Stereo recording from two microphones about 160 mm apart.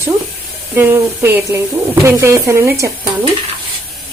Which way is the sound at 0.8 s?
15° right (ahead or behind).